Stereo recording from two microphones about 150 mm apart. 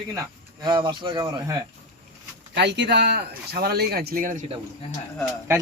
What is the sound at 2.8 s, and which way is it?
Speech, 90° right.